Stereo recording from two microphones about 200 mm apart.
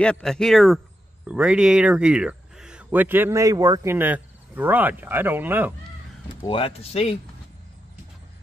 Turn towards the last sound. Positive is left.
turn(degrees=30)  # may be behind; listen again after turning